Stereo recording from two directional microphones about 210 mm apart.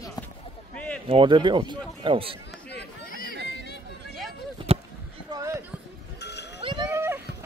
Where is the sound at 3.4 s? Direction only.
55° left (ahead or behind).